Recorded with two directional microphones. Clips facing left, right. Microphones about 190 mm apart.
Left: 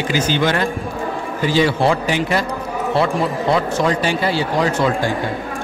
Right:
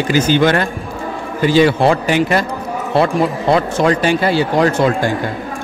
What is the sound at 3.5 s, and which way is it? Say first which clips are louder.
Speech: right 4 dB; 60° right (ahead or behind).